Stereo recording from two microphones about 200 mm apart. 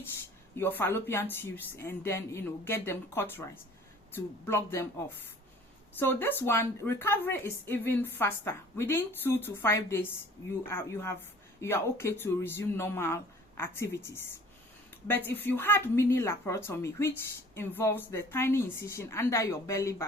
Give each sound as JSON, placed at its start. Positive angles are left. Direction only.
{"t": 0.5, "sound": "a woman's voice", "side_deg": 10}
{"t": 5.9, "sound": "a woman's voice", "side_deg": 10}